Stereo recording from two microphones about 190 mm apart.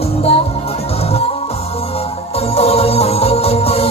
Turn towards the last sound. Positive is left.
turn(degrees=30)  # may be behind; listen again after turning